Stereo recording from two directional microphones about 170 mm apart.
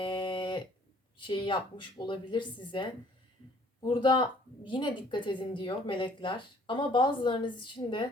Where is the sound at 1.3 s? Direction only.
30° left (ahead or behind).